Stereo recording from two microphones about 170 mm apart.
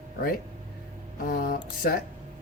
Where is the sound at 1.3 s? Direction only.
60° left (ahead or behind).